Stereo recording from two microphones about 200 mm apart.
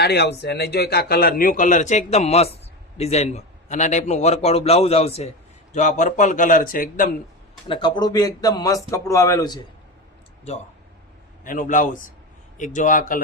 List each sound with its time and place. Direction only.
0.0 s a man's voice: 55° left (ahead or behind)
7.7 s speech: 25° left (ahead or behind)
11.4 s a man's voice: 40° left (ahead or behind)